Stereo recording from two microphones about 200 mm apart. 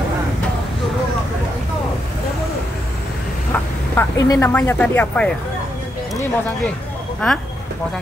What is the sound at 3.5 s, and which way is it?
Vehicle, 10° left (ahead or behind).